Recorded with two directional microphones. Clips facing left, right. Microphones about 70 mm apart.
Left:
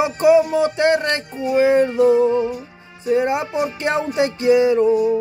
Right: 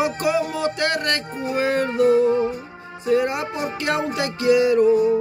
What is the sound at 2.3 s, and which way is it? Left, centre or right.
Music, right.